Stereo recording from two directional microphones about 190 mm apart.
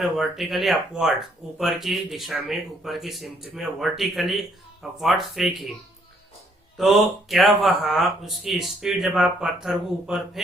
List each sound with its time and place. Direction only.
0.0 s speech: centre (ahead or behind)
6.7 s speech: centre (ahead or behind)